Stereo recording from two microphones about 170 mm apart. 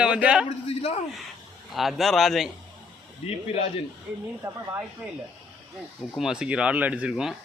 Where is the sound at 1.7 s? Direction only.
Centre (ahead or behind).